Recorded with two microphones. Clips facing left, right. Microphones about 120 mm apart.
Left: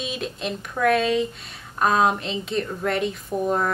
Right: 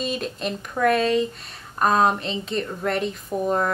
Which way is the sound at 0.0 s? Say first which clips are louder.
Right 2 dB; centre (ahead or behind).